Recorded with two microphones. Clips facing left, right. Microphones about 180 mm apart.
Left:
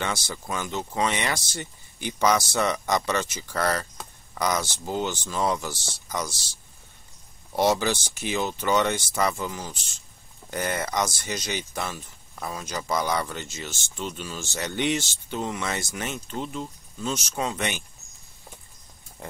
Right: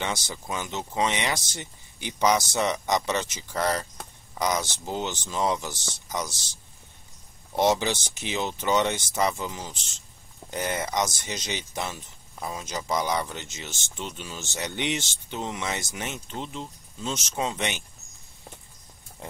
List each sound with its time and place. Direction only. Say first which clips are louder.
0.3 s speech: left 2 dB; 15° right (ahead or behind)